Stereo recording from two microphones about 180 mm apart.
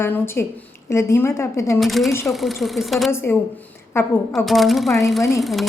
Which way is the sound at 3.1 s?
10° left (ahead or behind).